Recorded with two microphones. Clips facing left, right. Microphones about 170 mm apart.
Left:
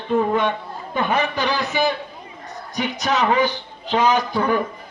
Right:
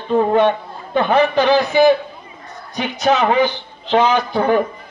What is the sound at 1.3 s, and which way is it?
Speech, 50° right (ahead or behind).